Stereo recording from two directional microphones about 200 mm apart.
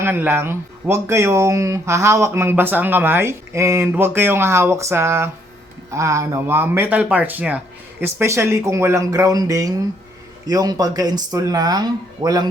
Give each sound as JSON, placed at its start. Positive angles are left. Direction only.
{"t": 0.0, "sound": "speech", "side_deg": -10}